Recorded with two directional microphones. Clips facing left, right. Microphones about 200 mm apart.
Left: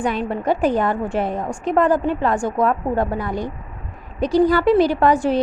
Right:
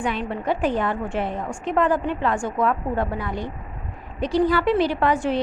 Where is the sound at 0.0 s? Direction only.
40° left (ahead or behind).